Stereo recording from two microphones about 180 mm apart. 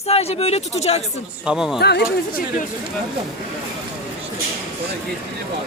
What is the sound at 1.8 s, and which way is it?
Speech, 65° left (ahead or behind).